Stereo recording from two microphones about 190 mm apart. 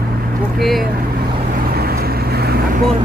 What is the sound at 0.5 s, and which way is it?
Speech, centre (ahead or behind).